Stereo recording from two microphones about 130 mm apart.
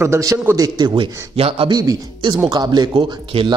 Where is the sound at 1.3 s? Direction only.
45° right (ahead or behind).